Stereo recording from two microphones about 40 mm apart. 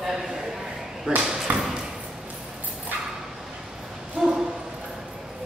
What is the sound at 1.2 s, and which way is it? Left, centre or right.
Speech, centre.